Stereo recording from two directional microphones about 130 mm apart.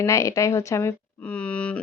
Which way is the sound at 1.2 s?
10° left (ahead or behind).